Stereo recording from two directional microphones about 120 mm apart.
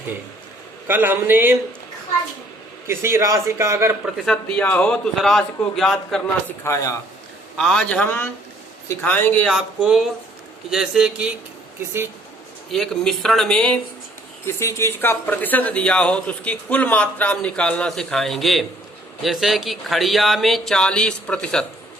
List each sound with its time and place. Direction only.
0.9 s speech: 15° right (ahead or behind)
2.8 s a man's voice: 20° right (ahead or behind)
4.0 s speech: 5° left (ahead or behind)
6.7 s speech: 25° left (ahead or behind)
7.6 s speech: 5° left (ahead or behind)
9.5 s speech: 5° right (ahead or behind)
12.7 s speech: 5° left (ahead or behind)
14.4 s speech: 25° left (ahead or behind); by 21.7 s 5° left (ahead or behind)